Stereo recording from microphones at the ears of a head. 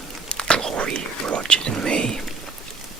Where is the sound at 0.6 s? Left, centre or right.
Right.